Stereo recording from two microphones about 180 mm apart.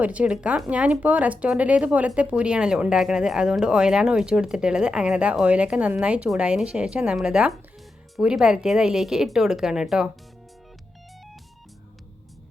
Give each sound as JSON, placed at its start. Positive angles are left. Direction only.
{"t": 0.0, "sound": "speech", "side_deg": -10}